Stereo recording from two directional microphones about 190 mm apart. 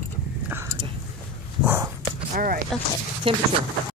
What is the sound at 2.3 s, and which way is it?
Speech, 45° right (ahead or behind).